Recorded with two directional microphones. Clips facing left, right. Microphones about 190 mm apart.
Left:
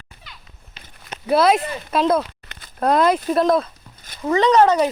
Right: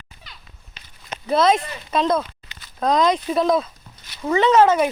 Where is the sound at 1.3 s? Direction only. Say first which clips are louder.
Left 2 dB; 5° left (ahead or behind).